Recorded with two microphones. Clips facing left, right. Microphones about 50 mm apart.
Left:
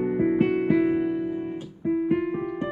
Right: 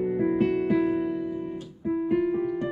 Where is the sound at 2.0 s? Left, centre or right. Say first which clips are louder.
Right 3 dB; centre.